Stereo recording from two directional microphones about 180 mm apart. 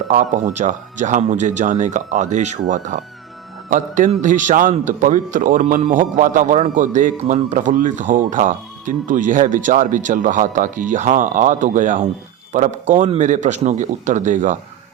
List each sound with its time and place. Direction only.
0.1 s a man's voice: 45° right (ahead or behind)